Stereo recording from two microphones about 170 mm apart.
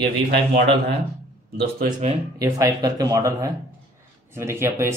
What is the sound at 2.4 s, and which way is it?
Speech, 20° right (ahead or behind).